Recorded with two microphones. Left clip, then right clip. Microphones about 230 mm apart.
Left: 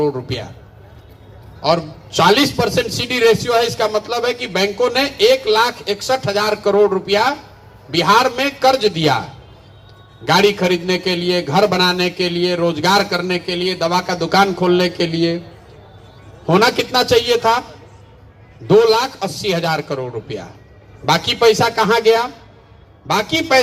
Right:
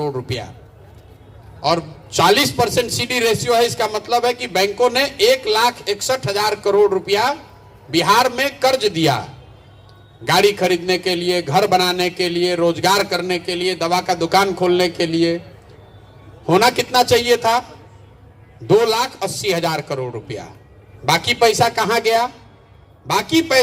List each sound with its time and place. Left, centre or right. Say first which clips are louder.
0.0 s a man's voice: left 4 dB; right
1.6 s a man's voice: left 2 dB; right
10.2 s a man's voice: left 1 dB; right
16.5 s a man's voice: left 1 dB; right
18.7 s a man's voice: left 3 dB; right